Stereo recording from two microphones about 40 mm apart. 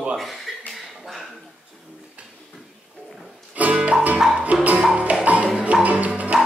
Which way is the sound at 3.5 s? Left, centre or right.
Right.